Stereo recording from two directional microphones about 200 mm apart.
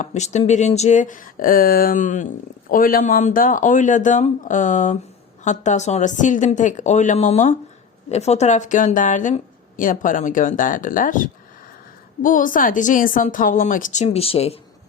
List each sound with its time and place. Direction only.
0.0 s speech: 35° left (ahead or behind)